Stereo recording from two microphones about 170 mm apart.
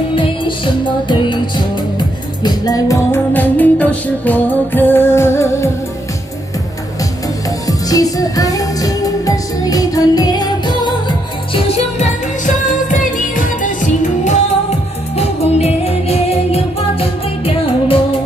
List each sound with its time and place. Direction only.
0.1 s music: 30° left (ahead or behind)
7.6 s music: 20° left (ahead or behind)
12.9 s music: 50° left (ahead or behind)
15.1 s music: 40° left (ahead or behind)
17.6 s music: 30° left (ahead or behind)